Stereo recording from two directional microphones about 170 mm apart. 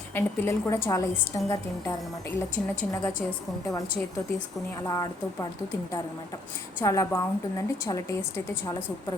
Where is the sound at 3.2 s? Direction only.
5° left (ahead or behind).